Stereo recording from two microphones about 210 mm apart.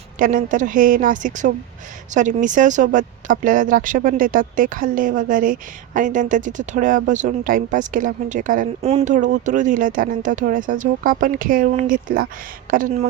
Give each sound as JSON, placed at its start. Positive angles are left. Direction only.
{"t": 0.2, "sound": "speech", "side_deg": -40}